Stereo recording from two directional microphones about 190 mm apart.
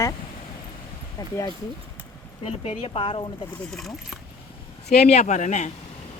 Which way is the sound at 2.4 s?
30° left (ahead or behind).